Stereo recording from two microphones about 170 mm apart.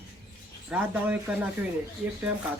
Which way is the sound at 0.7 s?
10° right (ahead or behind).